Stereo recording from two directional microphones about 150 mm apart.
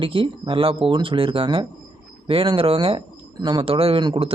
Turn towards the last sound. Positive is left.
turn(degrees=-35)  # may be behind; listen again after turning